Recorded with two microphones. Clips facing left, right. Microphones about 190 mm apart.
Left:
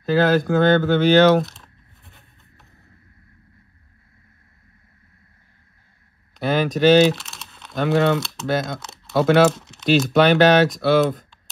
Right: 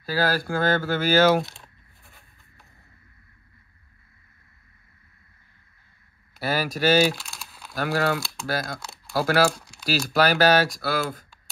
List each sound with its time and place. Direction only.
0.0 s speech: 5° right (ahead or behind)
6.3 s speech: 5° right (ahead or behind)